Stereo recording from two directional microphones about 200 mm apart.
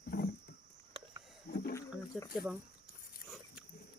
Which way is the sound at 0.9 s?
25° right (ahead or behind).